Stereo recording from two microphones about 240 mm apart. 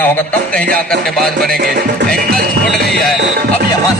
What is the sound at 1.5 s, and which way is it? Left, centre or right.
Music, right.